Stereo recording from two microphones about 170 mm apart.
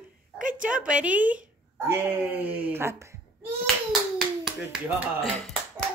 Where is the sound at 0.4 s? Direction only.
50° right (ahead or behind).